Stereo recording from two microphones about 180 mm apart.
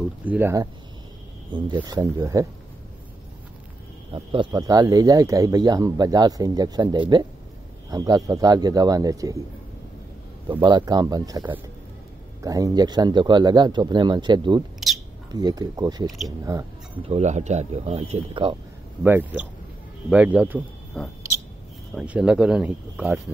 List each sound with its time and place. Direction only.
0.2 s speech: 10° right (ahead or behind)
1.5 s speech: 25° right (ahead or behind)
4.1 s speech: 25° right (ahead or behind)
10.5 s speech: 25° right (ahead or behind)
14.8 s a sound: centre (ahead or behind)
15.3 s speech: 20° right (ahead or behind)
17.1 s speech: 40° right (ahead or behind)
19.0 s speech: 10° right (ahead or behind)
21.0 s speech: 5° left (ahead or behind)
21.9 s speech: 5° right (ahead or behind)